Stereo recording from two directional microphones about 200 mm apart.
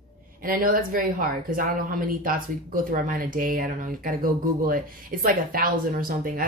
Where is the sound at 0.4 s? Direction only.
45° right (ahead or behind).